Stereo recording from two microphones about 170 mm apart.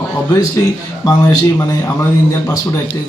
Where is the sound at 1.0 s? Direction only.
20° left (ahead or behind).